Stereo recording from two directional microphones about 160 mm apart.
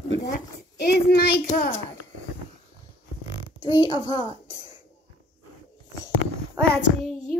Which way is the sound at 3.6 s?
25° left (ahead or behind).